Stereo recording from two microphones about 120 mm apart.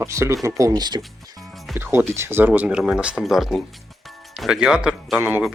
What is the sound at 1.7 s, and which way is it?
Speech, 20° right (ahead or behind).